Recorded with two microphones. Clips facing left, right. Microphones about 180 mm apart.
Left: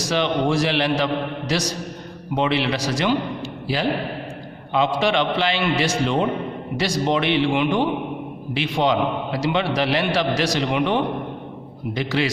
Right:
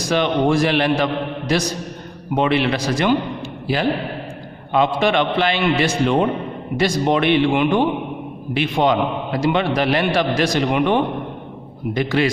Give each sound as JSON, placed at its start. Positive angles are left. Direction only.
{"t": 0.0, "sound": "a man's voice", "side_deg": -55}
{"t": 4.7, "sound": "a man's voice", "side_deg": -55}